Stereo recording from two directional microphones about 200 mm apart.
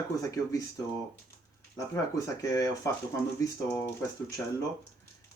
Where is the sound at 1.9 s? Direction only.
15° left (ahead or behind).